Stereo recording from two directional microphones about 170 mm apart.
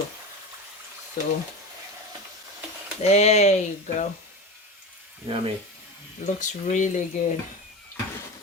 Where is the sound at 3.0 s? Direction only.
40° left (ahead or behind).